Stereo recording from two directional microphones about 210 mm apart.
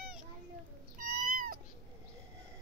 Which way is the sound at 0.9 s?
40° right (ahead or behind).